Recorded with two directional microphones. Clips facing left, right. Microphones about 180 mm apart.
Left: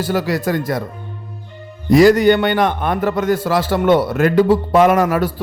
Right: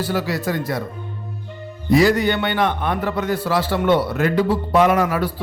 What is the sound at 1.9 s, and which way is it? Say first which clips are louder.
A man's voice: left 6 dB; 45° left (ahead or behind).